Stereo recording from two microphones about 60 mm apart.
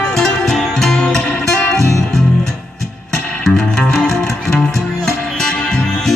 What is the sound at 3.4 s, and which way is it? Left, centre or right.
Music, centre.